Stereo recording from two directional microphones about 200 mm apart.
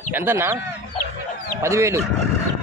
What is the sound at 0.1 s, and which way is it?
Speech, 10° right (ahead or behind).